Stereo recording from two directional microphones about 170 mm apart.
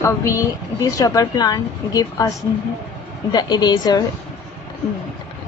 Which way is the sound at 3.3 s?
25° left (ahead or behind).